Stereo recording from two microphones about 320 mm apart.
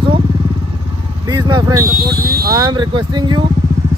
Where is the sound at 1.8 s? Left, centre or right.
Right.